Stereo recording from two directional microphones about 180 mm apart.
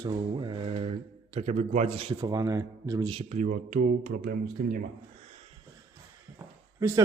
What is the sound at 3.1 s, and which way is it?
Speech, 35° right (ahead or behind).